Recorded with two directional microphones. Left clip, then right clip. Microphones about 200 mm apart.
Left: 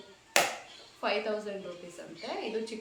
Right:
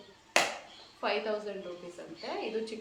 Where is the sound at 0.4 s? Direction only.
40° left (ahead or behind).